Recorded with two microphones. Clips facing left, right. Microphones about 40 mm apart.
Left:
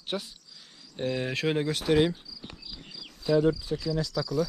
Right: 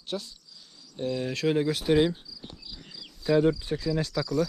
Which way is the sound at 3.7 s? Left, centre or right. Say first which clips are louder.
Right 1 dB; right.